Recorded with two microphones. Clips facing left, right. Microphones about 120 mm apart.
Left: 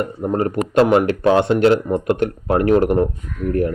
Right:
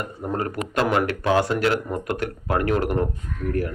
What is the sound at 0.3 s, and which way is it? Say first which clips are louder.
A man's voice: left 9 dB; 30° left (ahead or behind).